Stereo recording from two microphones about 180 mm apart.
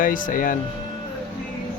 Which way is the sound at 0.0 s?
50° left (ahead or behind).